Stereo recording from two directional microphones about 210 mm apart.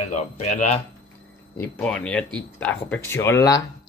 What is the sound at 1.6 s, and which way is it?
A child's voice, 5° left (ahead or behind).